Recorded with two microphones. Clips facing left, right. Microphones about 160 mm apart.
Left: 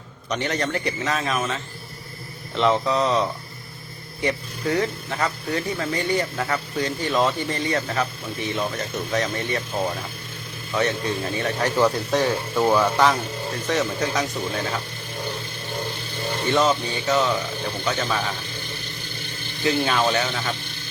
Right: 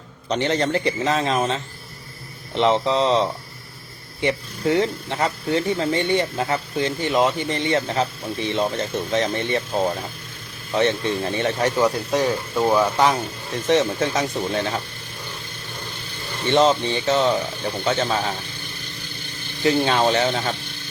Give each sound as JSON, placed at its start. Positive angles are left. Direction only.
{"t": 0.3, "sound": "speech", "side_deg": -30}
{"t": 2.6, "sound": "speech", "side_deg": -25}
{"t": 11.8, "sound": "speech", "side_deg": -10}
{"t": 16.5, "sound": "speech", "side_deg": -30}
{"t": 19.6, "sound": "speech", "side_deg": -30}